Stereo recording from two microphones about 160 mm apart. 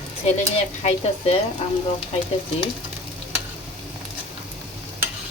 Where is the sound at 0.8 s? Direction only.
40° left (ahead or behind).